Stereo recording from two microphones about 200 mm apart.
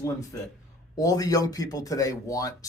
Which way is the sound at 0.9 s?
15° left (ahead or behind).